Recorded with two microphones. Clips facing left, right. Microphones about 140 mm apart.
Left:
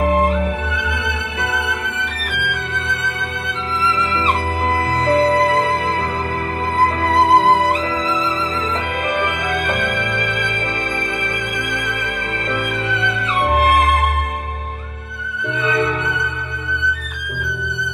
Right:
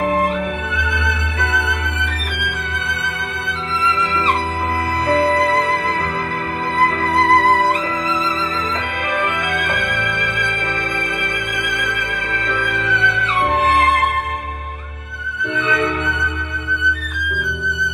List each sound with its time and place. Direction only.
0.1 s music: 30° left (ahead or behind)
5.0 s music: 35° left (ahead or behind)
7.0 s music: 30° left (ahead or behind)
9.5 s music: 35° left (ahead or behind)
12.4 s music: 35° left (ahead or behind)
13.0 s music: 10° left (ahead or behind)